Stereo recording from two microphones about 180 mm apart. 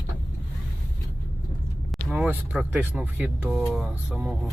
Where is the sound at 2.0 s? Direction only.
5° right (ahead or behind).